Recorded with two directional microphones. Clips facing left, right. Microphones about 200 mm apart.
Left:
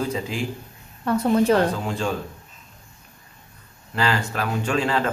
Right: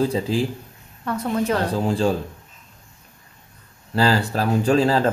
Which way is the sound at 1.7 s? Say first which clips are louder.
Right 5 dB; 35° right (ahead or behind).